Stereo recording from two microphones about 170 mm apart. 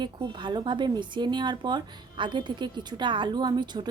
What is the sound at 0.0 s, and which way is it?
Speech, 25° right (ahead or behind).